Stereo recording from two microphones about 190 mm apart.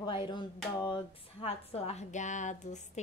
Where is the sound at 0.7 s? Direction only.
25° left (ahead or behind).